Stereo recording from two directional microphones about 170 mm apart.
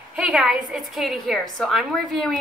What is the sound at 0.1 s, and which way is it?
A woman's voice, 5° right (ahead or behind).